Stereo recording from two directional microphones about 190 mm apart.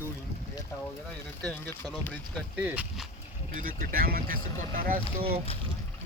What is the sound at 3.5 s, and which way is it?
Speech, 50° right (ahead or behind).